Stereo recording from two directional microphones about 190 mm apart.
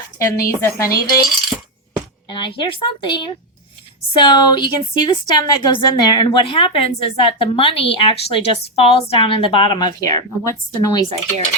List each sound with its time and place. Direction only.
0.2 s speech: 15° left (ahead or behind)
2.3 s a woman's voice: 25° left (ahead or behind)